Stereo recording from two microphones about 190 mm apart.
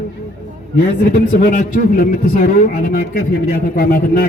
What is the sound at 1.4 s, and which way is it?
A man's voice, 45° left (ahead or behind).